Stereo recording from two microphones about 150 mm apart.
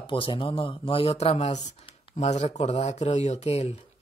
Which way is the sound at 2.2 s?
45° left (ahead or behind).